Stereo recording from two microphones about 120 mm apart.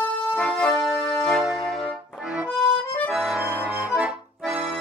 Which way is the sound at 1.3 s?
Centre (ahead or behind).